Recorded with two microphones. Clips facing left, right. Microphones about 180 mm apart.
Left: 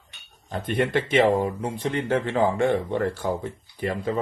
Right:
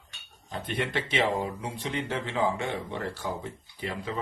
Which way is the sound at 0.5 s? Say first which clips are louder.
Left 7 dB; 50° left (ahead or behind).